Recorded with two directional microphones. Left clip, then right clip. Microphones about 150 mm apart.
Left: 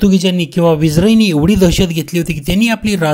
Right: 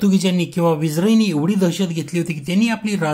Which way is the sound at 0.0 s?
25° left (ahead or behind).